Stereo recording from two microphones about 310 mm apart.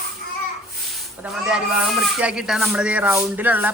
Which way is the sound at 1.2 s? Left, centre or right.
Centre.